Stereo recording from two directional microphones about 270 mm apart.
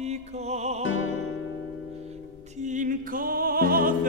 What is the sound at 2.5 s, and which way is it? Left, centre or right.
Music, right.